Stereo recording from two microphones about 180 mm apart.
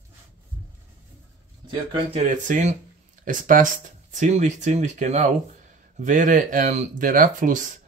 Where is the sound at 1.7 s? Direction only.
30° right (ahead or behind).